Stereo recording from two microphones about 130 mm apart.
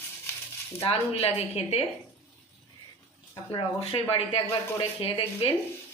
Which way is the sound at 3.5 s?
45° left (ahead or behind).